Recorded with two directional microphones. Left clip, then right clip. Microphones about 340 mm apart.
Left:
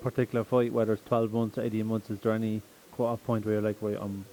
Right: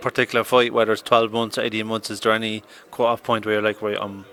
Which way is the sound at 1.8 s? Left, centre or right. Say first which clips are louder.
Right 10 dB; centre.